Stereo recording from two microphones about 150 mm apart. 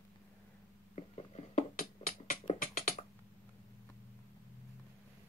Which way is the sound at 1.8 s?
65° left (ahead or behind).